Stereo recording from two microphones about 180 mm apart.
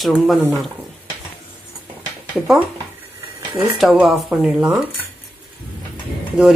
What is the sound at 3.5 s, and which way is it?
Speech, 20° right (ahead or behind).